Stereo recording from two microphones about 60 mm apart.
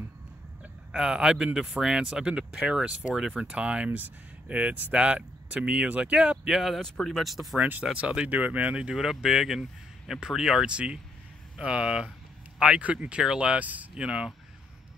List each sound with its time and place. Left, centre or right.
0.9 s speech: centre
6.3 s speech: centre
6.8 s speech: centre
7.5 s speech: right
7.8 s speech: centre
8.3 s speech: right